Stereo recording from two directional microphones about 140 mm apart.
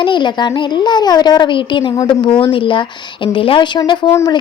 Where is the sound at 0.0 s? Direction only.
35° left (ahead or behind).